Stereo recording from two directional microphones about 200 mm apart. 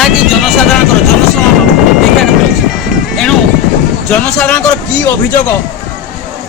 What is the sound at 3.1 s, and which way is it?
A woman's voice, 5° left (ahead or behind).